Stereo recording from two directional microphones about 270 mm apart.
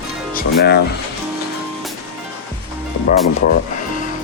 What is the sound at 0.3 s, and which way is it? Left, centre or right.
Speech, left.